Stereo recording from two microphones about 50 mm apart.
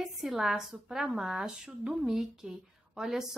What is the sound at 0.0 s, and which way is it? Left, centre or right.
Speech, centre.